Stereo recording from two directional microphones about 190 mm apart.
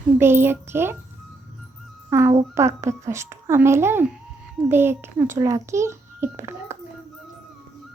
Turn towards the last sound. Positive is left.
turn(degrees=-15)  # may be behind; listen again after turning